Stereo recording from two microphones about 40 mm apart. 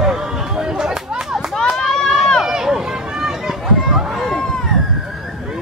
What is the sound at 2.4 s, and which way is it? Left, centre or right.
Run, centre.